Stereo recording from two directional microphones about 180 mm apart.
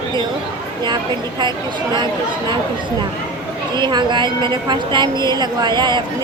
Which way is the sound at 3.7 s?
25° right (ahead or behind).